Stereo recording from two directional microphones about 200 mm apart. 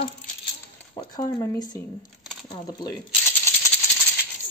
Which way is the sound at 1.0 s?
20° left (ahead or behind).